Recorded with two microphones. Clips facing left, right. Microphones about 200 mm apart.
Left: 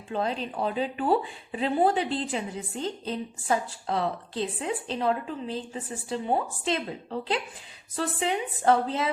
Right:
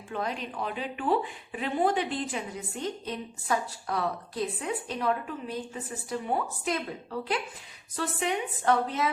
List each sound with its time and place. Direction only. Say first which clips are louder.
0.1 s a woman's voice: left 4 dB; 30° left (ahead or behind)